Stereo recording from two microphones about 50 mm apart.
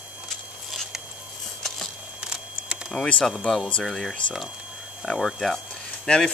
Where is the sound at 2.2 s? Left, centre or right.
Centre.